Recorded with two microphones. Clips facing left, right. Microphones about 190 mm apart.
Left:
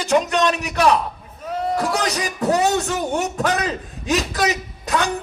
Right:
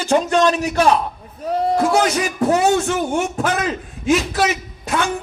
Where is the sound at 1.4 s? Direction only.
35° right (ahead or behind).